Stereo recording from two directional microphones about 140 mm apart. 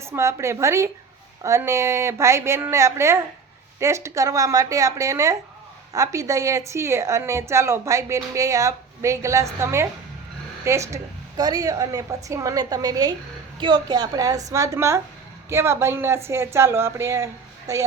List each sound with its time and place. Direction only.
0.0 s a woman's voice: 20° right (ahead or behind)